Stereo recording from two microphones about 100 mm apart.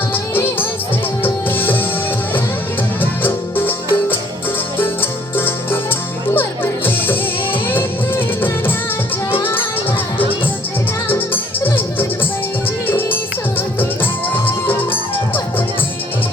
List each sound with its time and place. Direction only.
0.1 s music: 20° left (ahead or behind)
3.0 s music: 20° left (ahead or behind)
5.4 s music: 20° left (ahead or behind)
11.1 s music: 20° left (ahead or behind)